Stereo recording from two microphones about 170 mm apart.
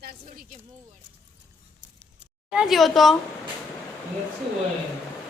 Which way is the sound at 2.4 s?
5° right (ahead or behind).